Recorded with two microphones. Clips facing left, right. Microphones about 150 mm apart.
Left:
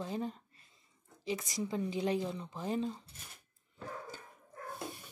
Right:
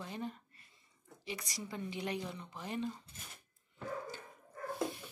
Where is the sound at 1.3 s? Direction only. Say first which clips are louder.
Left 7 dB; 25° left (ahead or behind).